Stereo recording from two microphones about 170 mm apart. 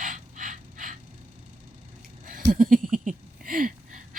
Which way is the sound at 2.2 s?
55° right (ahead or behind).